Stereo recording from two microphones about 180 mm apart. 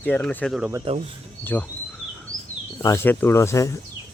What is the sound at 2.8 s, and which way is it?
Speech, 15° left (ahead or behind).